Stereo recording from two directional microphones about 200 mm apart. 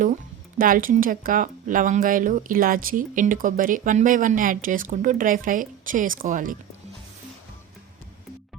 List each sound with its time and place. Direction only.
0.6 s speech: 45° right (ahead or behind)